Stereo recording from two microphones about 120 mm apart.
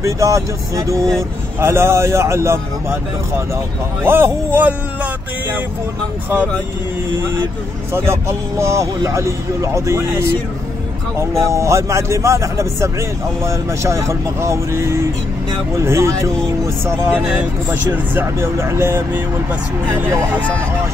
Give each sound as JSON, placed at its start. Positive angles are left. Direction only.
{"t": 0.0, "sound": "speech", "side_deg": -25}
{"t": 7.9, "sound": "speech", "side_deg": -20}
{"t": 11.4, "sound": "speech", "side_deg": -25}
{"t": 17.1, "sound": "speech", "side_deg": -10}